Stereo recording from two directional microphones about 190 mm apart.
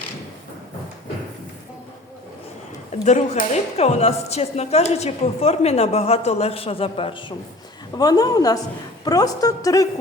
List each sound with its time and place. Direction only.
3.0 s a woman's voice: 35° left (ahead or behind); by 9.8 s 20° left (ahead or behind)